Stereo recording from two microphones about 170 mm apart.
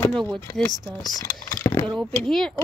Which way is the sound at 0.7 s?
25° right (ahead or behind).